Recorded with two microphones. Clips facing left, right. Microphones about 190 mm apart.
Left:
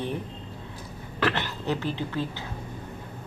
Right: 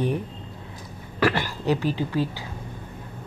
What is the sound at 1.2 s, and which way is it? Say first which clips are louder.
Speech: right 4 dB; 10° right (ahead or behind).